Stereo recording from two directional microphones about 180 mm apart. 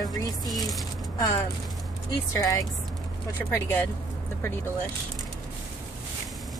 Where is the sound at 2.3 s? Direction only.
20° left (ahead or behind).